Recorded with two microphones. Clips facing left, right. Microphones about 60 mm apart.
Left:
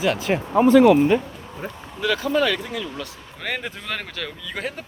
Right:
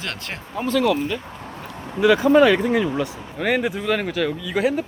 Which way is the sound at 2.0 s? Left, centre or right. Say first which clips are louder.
Right 7 dB; centre.